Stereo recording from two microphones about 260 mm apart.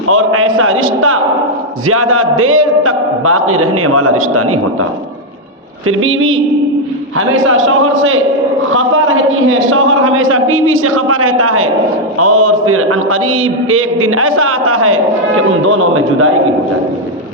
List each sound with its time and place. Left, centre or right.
0.1 s a man's voice: right
5.9 s a man's voice: right